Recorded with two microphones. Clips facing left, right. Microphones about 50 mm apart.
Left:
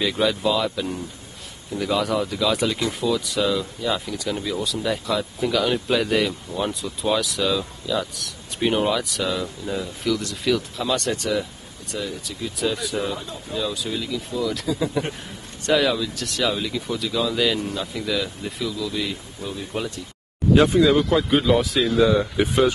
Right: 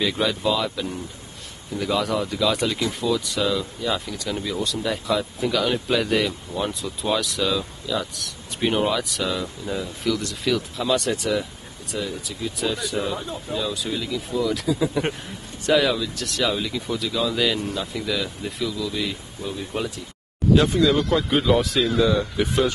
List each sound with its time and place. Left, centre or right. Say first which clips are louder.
0.0 s speech: left 1 dB; centre
20.6 s speech: left 2 dB; centre
21.2 s speech: left 1 dB; centre